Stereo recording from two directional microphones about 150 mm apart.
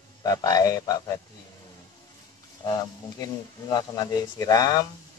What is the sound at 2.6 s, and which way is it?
Speech, 25° left (ahead or behind).